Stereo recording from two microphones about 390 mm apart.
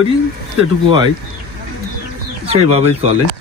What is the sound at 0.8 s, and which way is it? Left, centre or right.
Speech, centre.